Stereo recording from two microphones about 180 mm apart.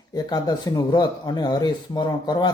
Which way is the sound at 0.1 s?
20° left (ahead or behind).